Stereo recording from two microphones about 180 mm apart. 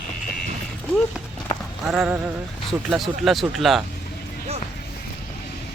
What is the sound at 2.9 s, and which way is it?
Speech, centre (ahead or behind).